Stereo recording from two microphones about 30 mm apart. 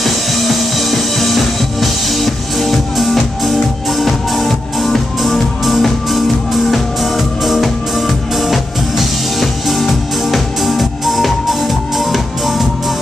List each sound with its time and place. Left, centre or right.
0.0 s music: centre